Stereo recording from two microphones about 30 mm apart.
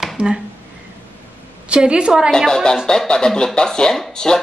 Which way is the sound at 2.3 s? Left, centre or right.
Centre.